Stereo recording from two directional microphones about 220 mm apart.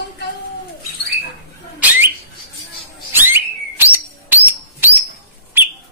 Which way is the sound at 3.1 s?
10° right (ahead or behind).